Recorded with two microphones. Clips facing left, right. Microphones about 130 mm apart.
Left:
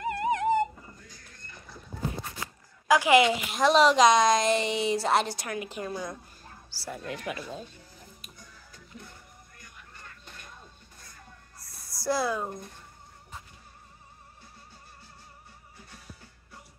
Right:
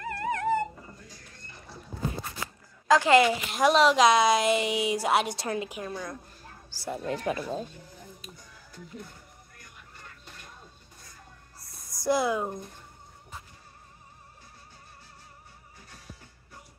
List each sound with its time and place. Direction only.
0.0 s music: 20° left (ahead or behind)
2.9 s a woman's voice: 15° left (ahead or behind)
3.5 s a woman's voice: centre (ahead or behind)
5.3 s a woman's voice: 25° right (ahead or behind)
5.7 s a woman's voice: centre (ahead or behind)
6.7 s speech: 20° right (ahead or behind)
7.1 s speech: 35° right (ahead or behind)
11.9 s speech: 20° right (ahead or behind)